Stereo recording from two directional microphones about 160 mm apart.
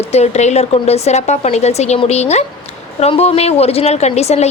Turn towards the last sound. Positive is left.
turn(degrees=40)  # may be behind; listen again after turning